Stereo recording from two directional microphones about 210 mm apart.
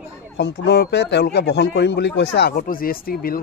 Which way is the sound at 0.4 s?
55° left (ahead or behind).